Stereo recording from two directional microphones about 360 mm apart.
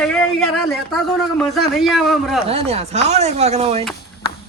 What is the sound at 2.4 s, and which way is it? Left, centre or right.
Speech, centre.